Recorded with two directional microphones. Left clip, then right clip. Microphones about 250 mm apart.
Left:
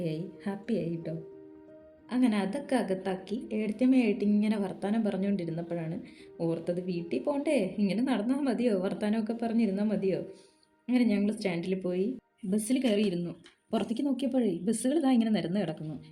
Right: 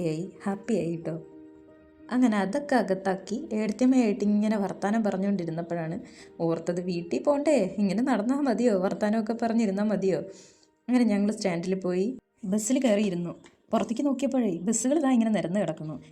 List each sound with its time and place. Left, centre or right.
0.0 s a woman's voice: centre